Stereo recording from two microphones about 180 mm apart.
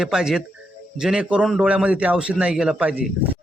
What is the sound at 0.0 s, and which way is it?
A man's voice, 5° right (ahead or behind).